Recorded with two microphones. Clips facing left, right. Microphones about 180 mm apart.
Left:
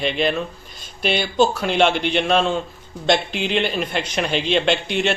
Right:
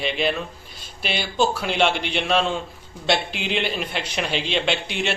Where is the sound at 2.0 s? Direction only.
45° left (ahead or behind).